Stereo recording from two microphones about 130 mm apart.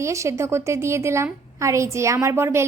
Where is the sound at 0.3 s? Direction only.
20° right (ahead or behind).